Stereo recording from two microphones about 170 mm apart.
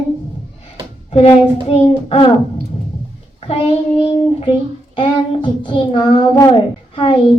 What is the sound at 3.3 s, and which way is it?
A child's voice, 35° left (ahead or behind).